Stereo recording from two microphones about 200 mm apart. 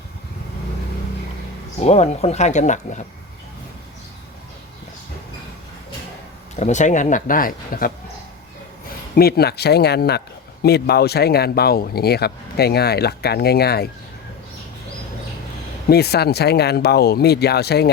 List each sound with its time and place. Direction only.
1.8 s speech: 35° left (ahead or behind)
6.6 s speech: 35° left (ahead or behind)
9.1 s speech: 50° left (ahead or behind)
15.9 s speech: 55° left (ahead or behind)